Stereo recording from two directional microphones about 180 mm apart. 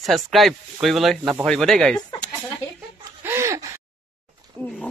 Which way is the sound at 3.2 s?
15° right (ahead or behind).